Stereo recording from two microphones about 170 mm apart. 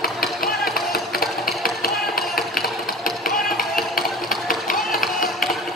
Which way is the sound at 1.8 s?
60° left (ahead or behind).